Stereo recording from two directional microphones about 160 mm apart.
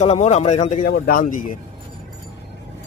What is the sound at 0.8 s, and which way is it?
Speech, 65° left (ahead or behind).